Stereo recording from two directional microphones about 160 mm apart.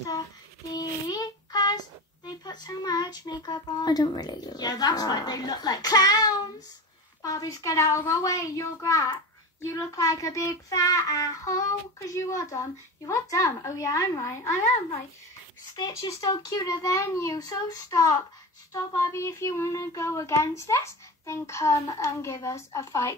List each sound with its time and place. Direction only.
0.7 s child singing: 25° left (ahead or behind)
2.2 s a woman's voice: 25° left (ahead or behind)
7.2 s a woman's voice: 20° left (ahead or behind)
15.7 s a woman's voice: 25° left (ahead or behind)
18.7 s child singing: 15° left (ahead or behind)